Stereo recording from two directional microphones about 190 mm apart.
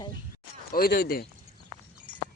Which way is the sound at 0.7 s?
50° left (ahead or behind).